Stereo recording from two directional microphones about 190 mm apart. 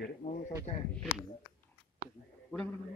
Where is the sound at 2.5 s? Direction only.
5° left (ahead or behind).